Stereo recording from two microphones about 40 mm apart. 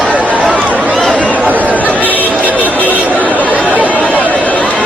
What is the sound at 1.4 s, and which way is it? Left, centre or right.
Chatter, right.